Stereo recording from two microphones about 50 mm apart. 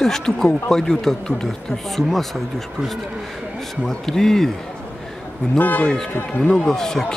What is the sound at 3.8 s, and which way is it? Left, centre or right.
Speech, centre.